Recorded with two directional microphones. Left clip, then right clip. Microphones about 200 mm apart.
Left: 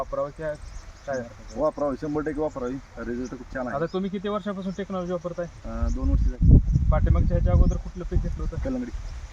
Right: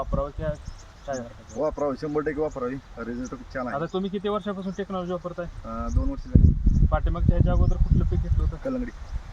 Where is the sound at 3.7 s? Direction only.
20° left (ahead or behind).